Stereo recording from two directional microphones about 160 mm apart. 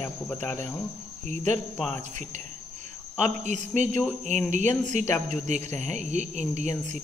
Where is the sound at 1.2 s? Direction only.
50° right (ahead or behind).